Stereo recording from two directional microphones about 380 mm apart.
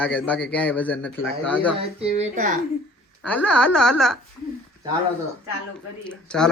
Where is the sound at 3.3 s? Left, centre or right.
Centre.